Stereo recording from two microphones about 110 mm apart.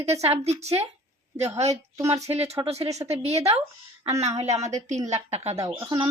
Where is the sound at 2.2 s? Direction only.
70° right (ahead or behind).